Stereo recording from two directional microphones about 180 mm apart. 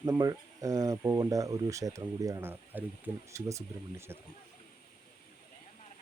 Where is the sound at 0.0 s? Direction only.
15° right (ahead or behind).